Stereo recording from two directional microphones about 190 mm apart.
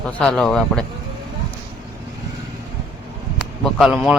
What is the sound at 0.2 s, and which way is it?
Speech, 5° left (ahead or behind).